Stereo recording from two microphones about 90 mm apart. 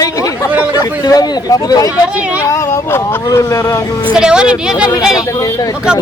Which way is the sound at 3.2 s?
35° left (ahead or behind).